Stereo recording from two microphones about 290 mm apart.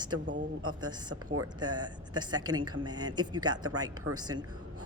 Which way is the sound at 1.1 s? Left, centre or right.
Right.